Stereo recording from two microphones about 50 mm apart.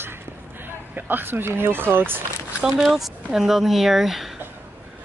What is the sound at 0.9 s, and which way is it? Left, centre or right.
Speech, right.